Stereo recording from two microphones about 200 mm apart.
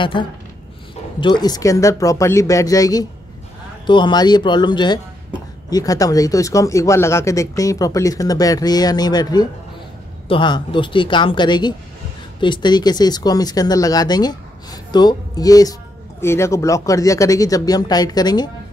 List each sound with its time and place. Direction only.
0.0 s speech: 25° left (ahead or behind)